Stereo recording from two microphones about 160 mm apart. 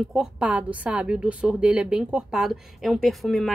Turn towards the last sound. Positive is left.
turn(degrees=0)  # may be behind; listen again after turning